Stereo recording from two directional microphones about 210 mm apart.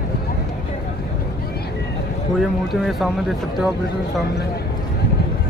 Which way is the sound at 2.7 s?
Centre (ahead or behind).